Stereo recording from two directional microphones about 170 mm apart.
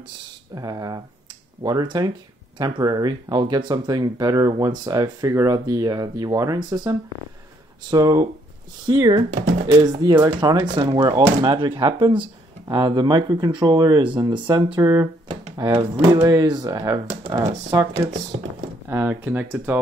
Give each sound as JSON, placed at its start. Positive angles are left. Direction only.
{"t": 0.6, "sound": "speech", "side_deg": -20}
{"t": 18.9, "sound": "speech", "side_deg": -10}